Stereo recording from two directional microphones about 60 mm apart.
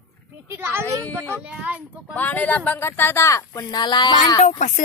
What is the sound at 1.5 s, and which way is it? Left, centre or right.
Speech, right.